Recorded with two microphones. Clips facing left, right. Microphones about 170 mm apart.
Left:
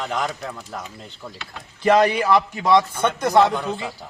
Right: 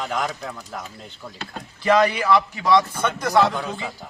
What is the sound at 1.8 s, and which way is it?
Speech, 35° left (ahead or behind).